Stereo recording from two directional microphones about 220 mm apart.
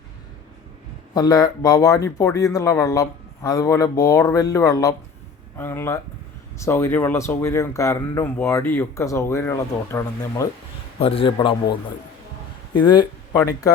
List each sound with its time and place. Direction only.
1.1 s speech: 15° left (ahead or behind)
11.0 s a man's voice: 25° left (ahead or behind)
12.8 s a man's voice: 20° left (ahead or behind)